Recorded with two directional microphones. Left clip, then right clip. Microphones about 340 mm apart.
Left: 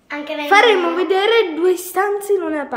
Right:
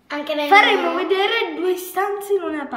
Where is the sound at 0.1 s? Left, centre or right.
Right.